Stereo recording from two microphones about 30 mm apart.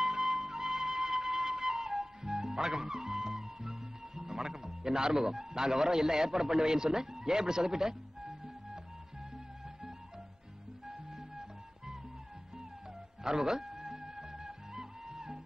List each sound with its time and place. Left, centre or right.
0.0 s music: centre
5.2 s a man's voice: centre
10.9 s music: centre
13.2 s music: centre